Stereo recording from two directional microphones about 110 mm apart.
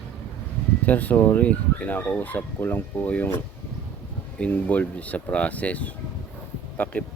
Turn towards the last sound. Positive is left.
turn(degrees=15)  # may be behind; listen again after turning